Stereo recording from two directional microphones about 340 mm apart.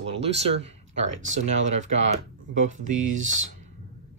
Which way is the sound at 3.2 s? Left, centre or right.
Right.